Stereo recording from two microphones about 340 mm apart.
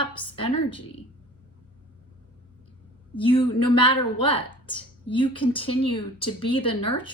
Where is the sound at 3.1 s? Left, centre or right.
Centre.